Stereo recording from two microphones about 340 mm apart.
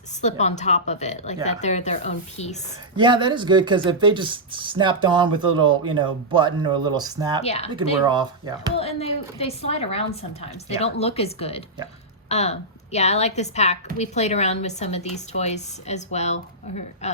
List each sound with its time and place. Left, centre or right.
0.2 s a woman's voice: centre
2.9 s speech: centre
7.4 s a woman's voice: centre
8.0 s speech: centre
8.7 s a woman's voice: centre